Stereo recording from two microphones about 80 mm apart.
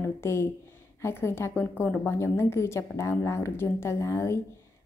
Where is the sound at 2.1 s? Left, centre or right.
Left.